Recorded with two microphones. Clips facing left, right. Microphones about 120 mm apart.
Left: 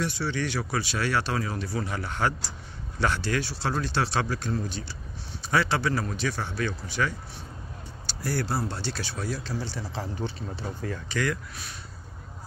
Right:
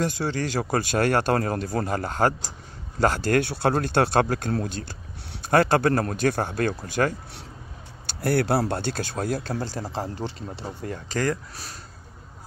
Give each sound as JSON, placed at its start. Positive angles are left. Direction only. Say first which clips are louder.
{"t": 0.0, "sound": "speech", "louder": "right 3 dB", "side_deg": -40}
{"t": 8.1, "sound": "speech", "louder": "right 7 dB", "side_deg": -60}
{"t": 10.1, "sound": "speech", "louder": "right 1 dB", "side_deg": -90}
{"t": 10.8, "sound": "speech", "louder": "right 3 dB", "side_deg": -35}